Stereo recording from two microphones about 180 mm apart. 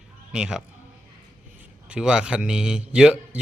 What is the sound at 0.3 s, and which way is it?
Speech, 5° right (ahead or behind).